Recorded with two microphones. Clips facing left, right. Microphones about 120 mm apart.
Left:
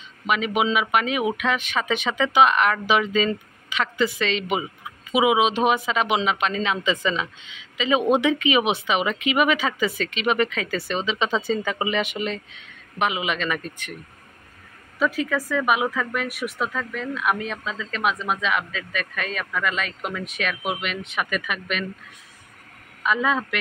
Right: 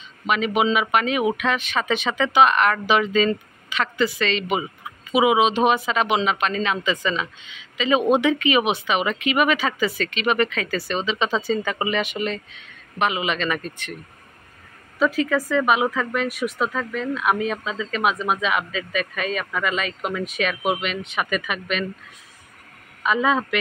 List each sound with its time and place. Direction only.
0.6 s speech: 10° left (ahead or behind)
15.1 s speech: 5° left (ahead or behind)
23.0 s a man's voice: centre (ahead or behind)